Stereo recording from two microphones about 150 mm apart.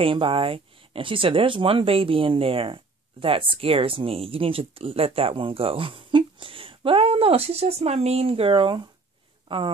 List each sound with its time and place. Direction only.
0.0 s speech: 35° right (ahead or behind)